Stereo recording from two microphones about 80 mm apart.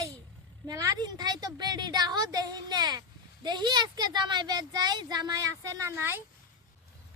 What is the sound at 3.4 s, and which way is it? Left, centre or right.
Speech, right.